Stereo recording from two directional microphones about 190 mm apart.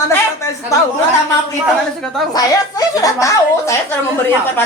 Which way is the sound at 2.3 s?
20° left (ahead or behind).